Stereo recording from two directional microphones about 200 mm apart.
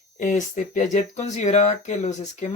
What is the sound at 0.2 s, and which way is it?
Speech, 40° left (ahead or behind).